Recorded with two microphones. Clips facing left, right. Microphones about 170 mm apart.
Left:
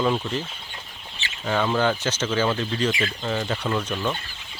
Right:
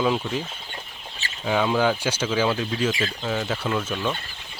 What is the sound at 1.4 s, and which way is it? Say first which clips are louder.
Speech: right 1 dB; 5° right (ahead or behind).